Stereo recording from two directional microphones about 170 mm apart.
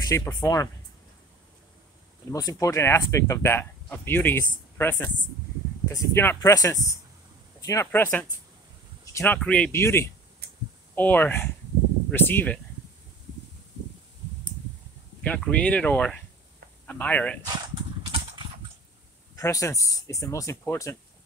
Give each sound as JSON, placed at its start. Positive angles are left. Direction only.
{"t": 0.1, "sound": "speech", "side_deg": 20}
{"t": 2.3, "sound": "speech", "side_deg": 20}
{"t": 10.4, "sound": "a sound", "side_deg": -65}
{"t": 11.0, "sound": "speech", "side_deg": 10}
{"t": 15.2, "sound": "speech", "side_deg": 5}
{"t": 17.7, "sound": "a sound", "side_deg": -25}
{"t": 19.3, "sound": "speech", "side_deg": 20}